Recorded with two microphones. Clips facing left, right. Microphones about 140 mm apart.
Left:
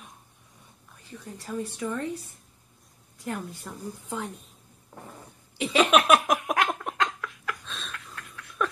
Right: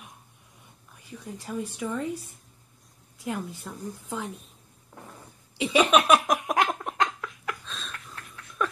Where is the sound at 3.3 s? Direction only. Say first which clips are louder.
Right 1 dB; centre (ahead or behind).